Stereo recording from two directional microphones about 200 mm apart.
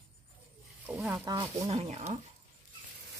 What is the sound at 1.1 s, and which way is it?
Speech, 20° right (ahead or behind).